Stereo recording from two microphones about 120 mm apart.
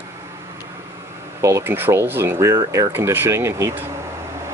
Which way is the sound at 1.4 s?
25° right (ahead or behind).